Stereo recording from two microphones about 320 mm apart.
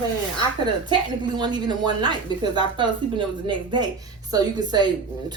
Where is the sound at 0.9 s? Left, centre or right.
Centre.